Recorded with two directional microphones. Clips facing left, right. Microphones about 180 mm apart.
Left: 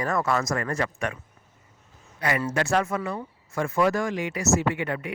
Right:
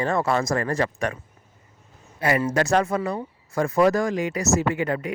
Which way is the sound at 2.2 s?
25° right (ahead or behind).